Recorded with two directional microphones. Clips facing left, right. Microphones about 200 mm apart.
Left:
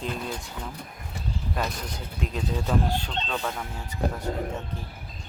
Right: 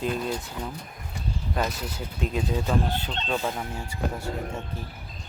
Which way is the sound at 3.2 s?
15° right (ahead or behind).